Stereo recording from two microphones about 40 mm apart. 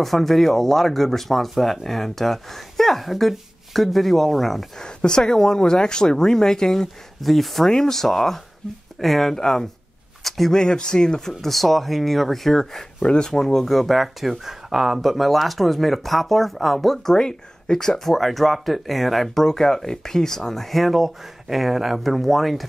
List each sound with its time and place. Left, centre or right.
0.0 s speech: centre
4.7 s speech: centre
10.2 s speech: centre
10.5 s speech: centre
11.5 s speech: centre
13.0 s speech: left
13.3 s speech: centre